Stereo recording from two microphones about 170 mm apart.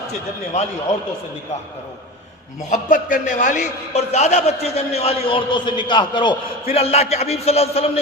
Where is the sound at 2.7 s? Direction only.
50° left (ahead or behind).